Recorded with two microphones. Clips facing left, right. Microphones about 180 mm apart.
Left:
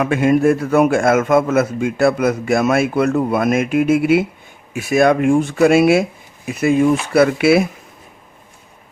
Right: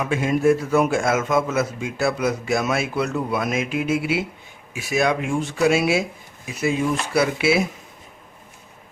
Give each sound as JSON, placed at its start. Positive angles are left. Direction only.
{"t": 0.0, "sound": "a man's voice", "side_deg": 60}